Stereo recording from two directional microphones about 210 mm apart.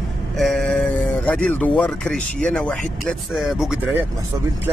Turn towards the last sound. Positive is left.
turn(degrees=0)  # may be behind; listen again after turning